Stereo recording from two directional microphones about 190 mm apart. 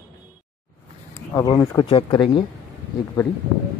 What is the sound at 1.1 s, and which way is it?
Speech, 15° left (ahead or behind).